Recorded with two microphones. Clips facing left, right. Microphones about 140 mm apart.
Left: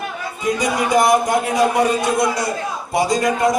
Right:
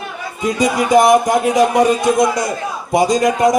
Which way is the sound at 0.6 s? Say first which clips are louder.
Right 5 dB; 20° right (ahead or behind).